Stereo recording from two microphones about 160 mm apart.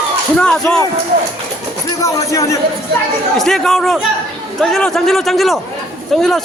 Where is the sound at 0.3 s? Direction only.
5° left (ahead or behind).